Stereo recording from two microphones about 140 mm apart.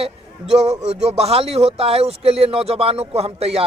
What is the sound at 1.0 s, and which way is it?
Speech, 50° right (ahead or behind).